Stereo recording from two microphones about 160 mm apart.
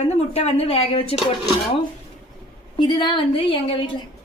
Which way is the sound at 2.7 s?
30° left (ahead or behind).